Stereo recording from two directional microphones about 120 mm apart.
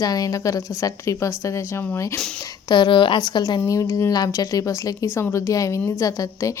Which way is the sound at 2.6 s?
40° left (ahead or behind).